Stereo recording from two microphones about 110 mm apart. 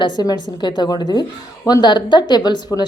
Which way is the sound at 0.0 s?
40° left (ahead or behind).